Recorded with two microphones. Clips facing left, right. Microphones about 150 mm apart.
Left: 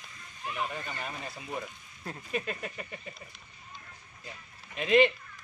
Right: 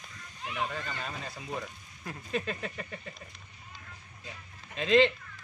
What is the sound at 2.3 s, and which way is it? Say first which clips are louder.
Speech: right 1 dB; 5° left (ahead or behind).